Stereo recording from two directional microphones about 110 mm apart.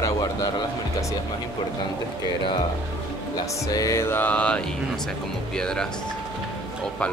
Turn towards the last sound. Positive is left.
turn(degrees=5)  # may be behind; listen again after turning